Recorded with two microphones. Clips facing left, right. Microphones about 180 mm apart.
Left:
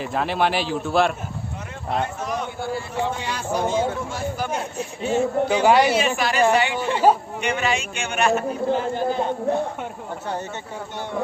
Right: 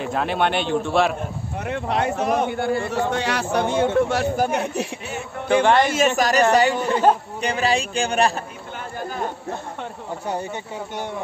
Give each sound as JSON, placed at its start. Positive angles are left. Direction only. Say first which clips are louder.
{"t": 0.0, "sound": "a man's voice", "louder": "even", "side_deg": 0}
{"t": 1.7, "sound": "speech", "louder": "right 4 dB", "side_deg": -80}
{"t": 5.6, "sound": "speech", "louder": "left 1 dB", "side_deg": 5}
{"t": 5.9, "sound": "speech", "louder": "right 2 dB", "side_deg": -45}
{"t": 6.9, "sound": "a man's voice", "louder": "left 3 dB", "side_deg": 5}
{"t": 7.4, "sound": "speech", "louder": "right 2 dB", "side_deg": -35}